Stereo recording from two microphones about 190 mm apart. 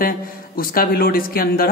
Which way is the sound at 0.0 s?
50° left (ahead or behind).